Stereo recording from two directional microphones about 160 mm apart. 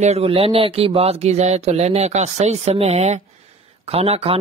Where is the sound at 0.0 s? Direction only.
40° right (ahead or behind).